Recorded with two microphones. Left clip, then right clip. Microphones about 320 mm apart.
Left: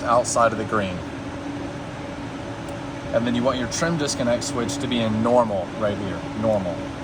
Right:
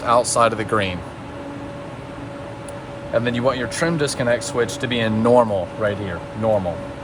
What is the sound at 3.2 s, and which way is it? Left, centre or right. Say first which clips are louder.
Speech: right 2 dB; right.